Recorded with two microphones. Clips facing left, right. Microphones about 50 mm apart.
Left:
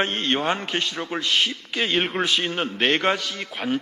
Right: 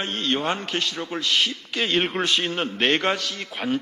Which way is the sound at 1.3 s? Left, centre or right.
Centre.